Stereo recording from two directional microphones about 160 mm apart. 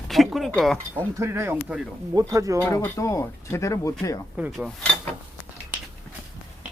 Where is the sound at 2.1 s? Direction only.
20° right (ahead or behind).